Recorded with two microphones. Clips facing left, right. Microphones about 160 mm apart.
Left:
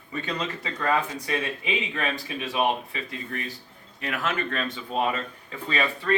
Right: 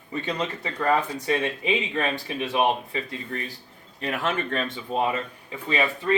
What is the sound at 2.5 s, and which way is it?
Speech, 25° right (ahead or behind).